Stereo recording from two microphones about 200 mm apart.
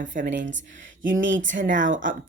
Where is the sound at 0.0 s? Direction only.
40° right (ahead or behind).